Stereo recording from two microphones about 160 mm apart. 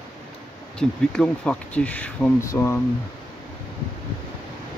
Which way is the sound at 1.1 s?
5° left (ahead or behind).